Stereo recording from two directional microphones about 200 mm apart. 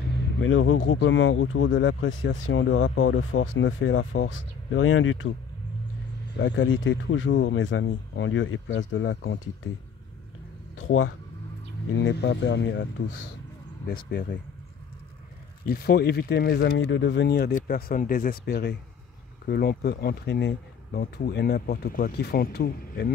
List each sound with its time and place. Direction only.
0.2 s speech: 75° left (ahead or behind)
6.3 s speech: 60° left (ahead or behind)
10.9 s speech: 90° left
11.9 s speech: 65° left (ahead or behind)
13.8 s speech: 50° left (ahead or behind)
15.6 s speech: 50° left (ahead or behind)
16.7 s speech: 65° left (ahead or behind)